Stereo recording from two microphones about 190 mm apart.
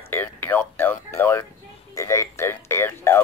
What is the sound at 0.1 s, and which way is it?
Speech, 10° left (ahead or behind).